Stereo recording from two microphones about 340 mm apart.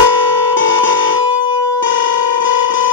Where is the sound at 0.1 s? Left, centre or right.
Left.